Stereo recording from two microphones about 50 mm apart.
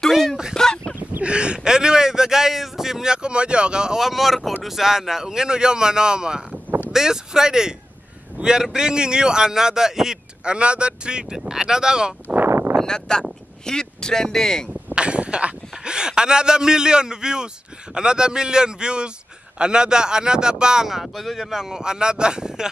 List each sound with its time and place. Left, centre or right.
0.6 s fowl: centre
1.2 s a man's voice: right
10.4 s speech: right
12.4 s a sound: right
12.7 s speech: centre
15.0 s a sound: right
15.7 s speech: centre